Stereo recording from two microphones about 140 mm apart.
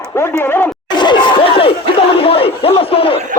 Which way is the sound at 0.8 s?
30° left (ahead or behind).